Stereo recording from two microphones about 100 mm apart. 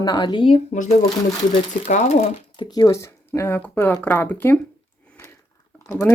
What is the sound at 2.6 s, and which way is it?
Speech, 40° left (ahead or behind).